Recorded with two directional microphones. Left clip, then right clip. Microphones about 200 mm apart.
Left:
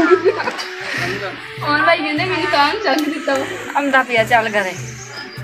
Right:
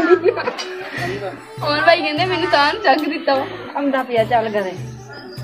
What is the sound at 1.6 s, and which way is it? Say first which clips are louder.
A woman's voice: even; 30° right (ahead or behind).